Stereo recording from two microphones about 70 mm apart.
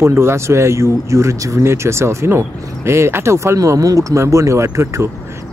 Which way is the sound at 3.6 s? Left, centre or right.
Right.